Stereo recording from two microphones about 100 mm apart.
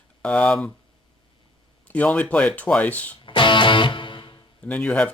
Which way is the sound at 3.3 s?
55° left (ahead or behind).